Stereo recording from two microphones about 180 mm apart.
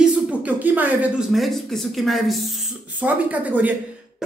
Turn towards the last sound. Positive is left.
turn(degrees=-10)  # may be behind; listen again after turning